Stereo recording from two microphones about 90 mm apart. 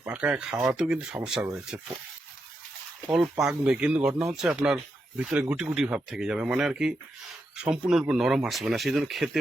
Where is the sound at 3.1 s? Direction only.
5° right (ahead or behind).